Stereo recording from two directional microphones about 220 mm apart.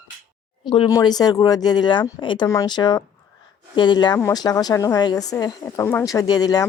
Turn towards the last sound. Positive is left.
turn(degrees=15)  # may be behind; listen again after turning